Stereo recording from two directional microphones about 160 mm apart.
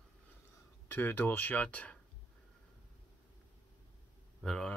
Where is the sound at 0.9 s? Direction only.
10° left (ahead or behind).